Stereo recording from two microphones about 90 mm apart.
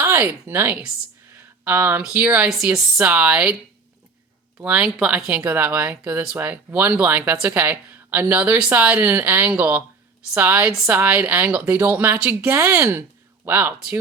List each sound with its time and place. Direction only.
0.0 s a woman's voice: 25° right (ahead or behind)
2.5 s a woman's voice: 5° right (ahead or behind)
4.6 s a woman's voice: 15° right (ahead or behind)